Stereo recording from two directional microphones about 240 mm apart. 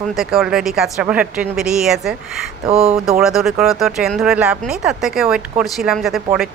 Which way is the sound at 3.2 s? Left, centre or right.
Centre.